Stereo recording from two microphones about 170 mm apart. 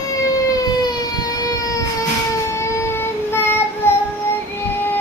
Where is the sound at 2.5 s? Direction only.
15° left (ahead or behind).